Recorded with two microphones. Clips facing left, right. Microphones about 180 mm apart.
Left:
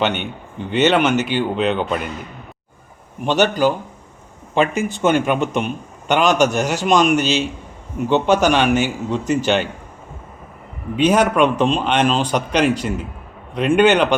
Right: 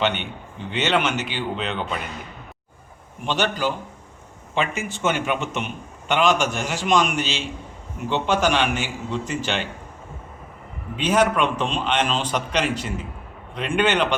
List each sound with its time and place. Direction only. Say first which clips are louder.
0.7 s a man's voice: left 7 dB; 45° left (ahead or behind)
3.2 s a man's voice: left 7 dB; 45° left (ahead or behind)
11.0 s a man's voice: left 5 dB; 45° left (ahead or behind)